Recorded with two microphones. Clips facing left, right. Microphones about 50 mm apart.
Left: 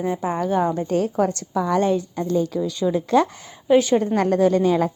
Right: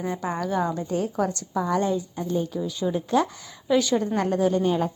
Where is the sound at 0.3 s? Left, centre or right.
Left.